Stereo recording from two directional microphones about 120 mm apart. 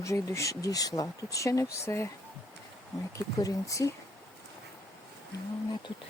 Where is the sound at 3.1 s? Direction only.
30° left (ahead or behind).